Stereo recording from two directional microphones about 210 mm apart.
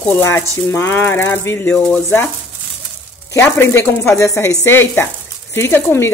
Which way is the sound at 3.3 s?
10° left (ahead or behind).